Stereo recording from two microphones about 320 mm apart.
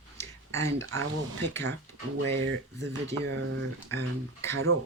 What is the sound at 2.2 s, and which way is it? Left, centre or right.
Speech, right.